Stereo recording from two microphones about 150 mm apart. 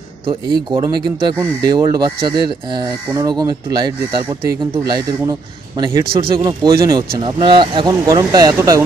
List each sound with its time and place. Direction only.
0.3 s speech: 35° right (ahead or behind)
6.0 s speech: 35° right (ahead or behind)